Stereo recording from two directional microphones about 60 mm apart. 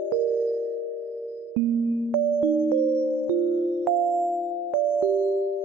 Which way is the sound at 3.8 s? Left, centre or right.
Centre.